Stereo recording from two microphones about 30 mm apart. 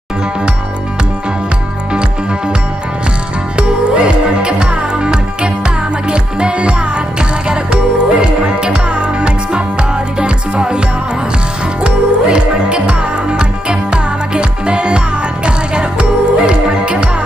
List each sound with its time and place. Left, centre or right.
3.5 s music: right
11.8 s music: right